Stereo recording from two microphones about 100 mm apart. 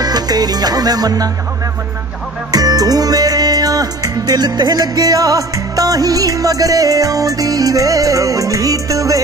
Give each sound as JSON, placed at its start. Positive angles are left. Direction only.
{"t": 0.0, "sound": "music", "side_deg": -40}
{"t": 2.5, "sound": "music", "side_deg": -40}